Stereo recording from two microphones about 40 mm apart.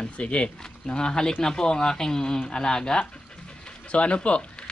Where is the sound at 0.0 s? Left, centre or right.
Left.